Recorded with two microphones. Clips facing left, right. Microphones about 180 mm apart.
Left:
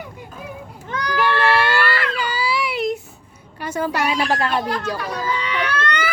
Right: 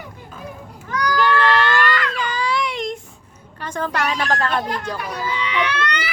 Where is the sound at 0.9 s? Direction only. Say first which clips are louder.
Right 4 dB; 25° left (ahead or behind).